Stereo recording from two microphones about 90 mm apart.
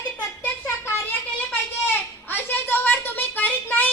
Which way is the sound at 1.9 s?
25° left (ahead or behind).